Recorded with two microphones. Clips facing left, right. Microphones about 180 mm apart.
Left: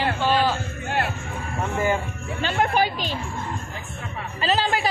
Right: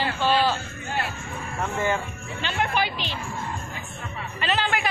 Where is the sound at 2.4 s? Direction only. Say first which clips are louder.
Left 4 dB; 45° left (ahead or behind).